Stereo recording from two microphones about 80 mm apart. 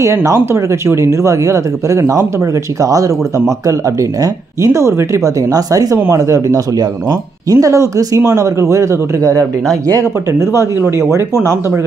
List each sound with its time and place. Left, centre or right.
0.0 s speech: right